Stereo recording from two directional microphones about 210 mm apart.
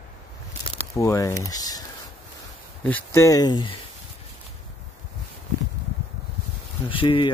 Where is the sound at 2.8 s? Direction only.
10° left (ahead or behind).